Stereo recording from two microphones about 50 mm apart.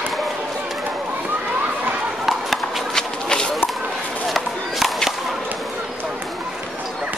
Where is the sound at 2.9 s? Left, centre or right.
Centre.